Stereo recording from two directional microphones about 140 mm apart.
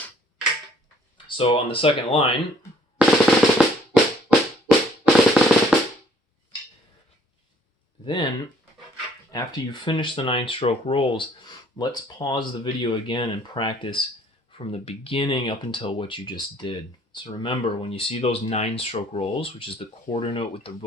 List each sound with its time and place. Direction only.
1.4 s speech: 40° left (ahead or behind)
3.0 s drum: centre (ahead or behind)
5.0 s drum: 5° right (ahead or behind)
8.0 s speech: 35° left (ahead or behind)
9.3 s speech: 30° left (ahead or behind)